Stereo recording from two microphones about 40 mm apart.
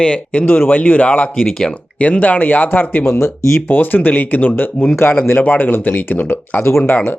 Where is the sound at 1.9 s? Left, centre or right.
Left.